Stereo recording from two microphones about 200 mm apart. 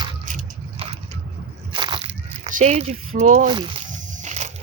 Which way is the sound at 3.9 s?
40° right (ahead or behind).